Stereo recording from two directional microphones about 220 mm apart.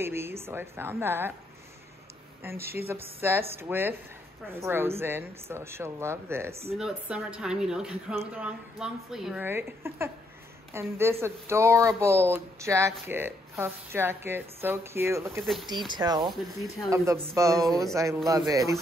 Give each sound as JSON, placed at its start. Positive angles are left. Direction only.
{"t": 0.0, "sound": "speech", "side_deg": -10}
{"t": 2.4, "sound": "a woman's voice", "side_deg": -10}
{"t": 15.4, "sound": "a woman's voice", "side_deg": 0}
{"t": 15.9, "sound": "speech", "side_deg": -20}